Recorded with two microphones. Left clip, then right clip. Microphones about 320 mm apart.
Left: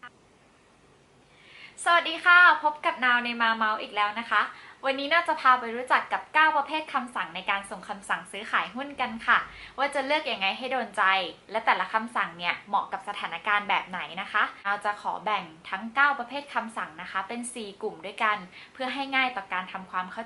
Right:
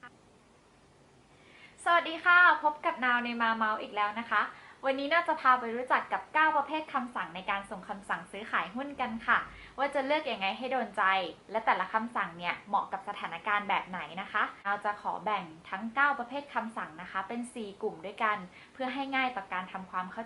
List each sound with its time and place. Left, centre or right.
1.8 s a woman's voice: centre